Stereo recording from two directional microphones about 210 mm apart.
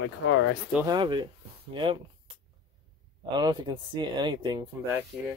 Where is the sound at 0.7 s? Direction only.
20° right (ahead or behind).